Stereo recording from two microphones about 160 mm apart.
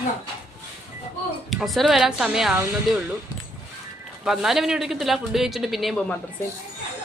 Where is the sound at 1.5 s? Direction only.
Centre (ahead or behind).